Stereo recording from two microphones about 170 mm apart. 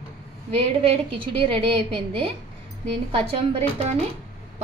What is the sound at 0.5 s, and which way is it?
A woman's voice, 35° right (ahead or behind).